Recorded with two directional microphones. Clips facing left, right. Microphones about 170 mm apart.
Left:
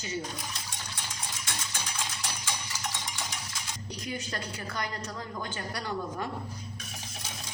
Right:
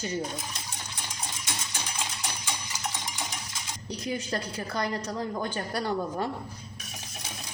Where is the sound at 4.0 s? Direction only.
30° right (ahead or behind).